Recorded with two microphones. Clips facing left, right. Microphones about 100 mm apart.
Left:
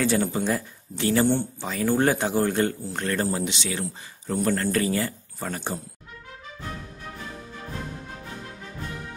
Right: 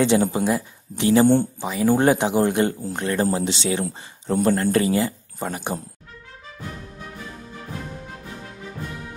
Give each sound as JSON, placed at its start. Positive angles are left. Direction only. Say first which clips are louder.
{"t": 0.0, "sound": "speech", "louder": "right 5 dB", "side_deg": -20}
{"t": 3.4, "sound": "speech", "louder": "right 6 dB", "side_deg": -30}